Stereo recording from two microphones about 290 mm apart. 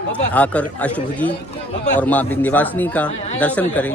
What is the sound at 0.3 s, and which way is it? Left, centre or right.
A man's voice, centre.